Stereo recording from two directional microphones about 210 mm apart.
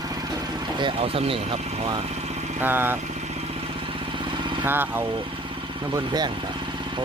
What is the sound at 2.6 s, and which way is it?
Speech, 10° right (ahead or behind).